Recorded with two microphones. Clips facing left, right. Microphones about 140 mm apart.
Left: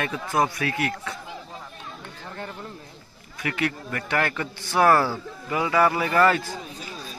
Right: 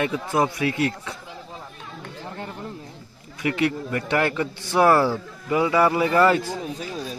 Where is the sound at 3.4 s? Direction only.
20° right (ahead or behind).